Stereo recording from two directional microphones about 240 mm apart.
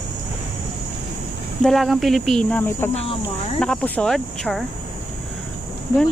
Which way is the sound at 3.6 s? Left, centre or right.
Centre.